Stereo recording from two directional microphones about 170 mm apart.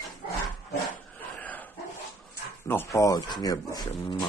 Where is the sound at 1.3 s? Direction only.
10° left (ahead or behind).